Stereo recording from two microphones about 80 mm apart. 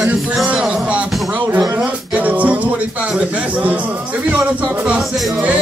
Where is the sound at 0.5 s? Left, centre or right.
Centre.